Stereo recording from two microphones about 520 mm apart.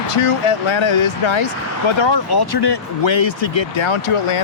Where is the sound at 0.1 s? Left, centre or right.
Left.